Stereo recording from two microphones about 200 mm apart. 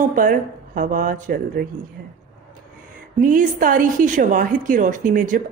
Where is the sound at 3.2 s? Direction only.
45° right (ahead or behind).